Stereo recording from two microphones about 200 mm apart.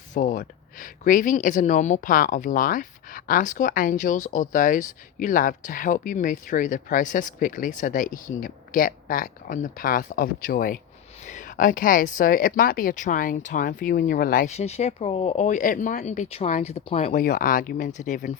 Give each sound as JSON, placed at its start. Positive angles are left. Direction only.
{"t": 0.1, "sound": "speech", "side_deg": 40}